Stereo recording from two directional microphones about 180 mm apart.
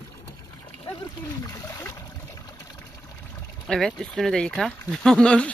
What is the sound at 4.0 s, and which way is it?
Speech, centre (ahead or behind).